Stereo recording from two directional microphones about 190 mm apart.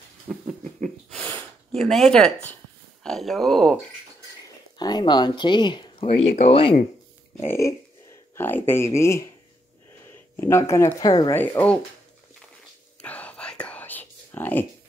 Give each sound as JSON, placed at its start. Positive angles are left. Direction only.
{"t": 0.3, "sound": "a sound", "side_deg": -10}
{"t": 0.8, "sound": "snort", "side_deg": 5}
{"t": 3.0, "sound": "speech", "side_deg": 0}
{"t": 4.7, "sound": "speech", "side_deg": 20}
{"t": 7.3, "sound": "speech", "side_deg": 15}
{"t": 10.3, "sound": "speech", "side_deg": 15}
{"t": 11.4, "sound": "speech", "side_deg": 10}
{"t": 13.0, "sound": "whispering", "side_deg": 5}